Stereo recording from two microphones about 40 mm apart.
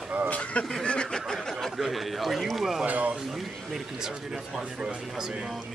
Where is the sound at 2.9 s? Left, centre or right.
Right.